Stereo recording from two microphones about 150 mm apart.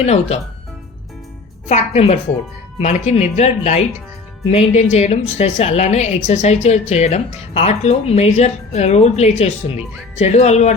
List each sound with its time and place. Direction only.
0.0 s a woman's voice: 45° left (ahead or behind)
1.6 s a woman's voice: 50° left (ahead or behind)